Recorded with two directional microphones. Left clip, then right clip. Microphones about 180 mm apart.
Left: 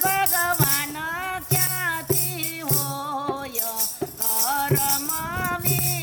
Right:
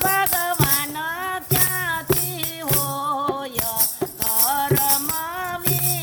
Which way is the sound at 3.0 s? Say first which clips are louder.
Right 7 dB; 15° right (ahead or behind).